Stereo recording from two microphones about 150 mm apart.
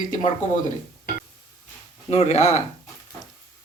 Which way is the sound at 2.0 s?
45° left (ahead or behind).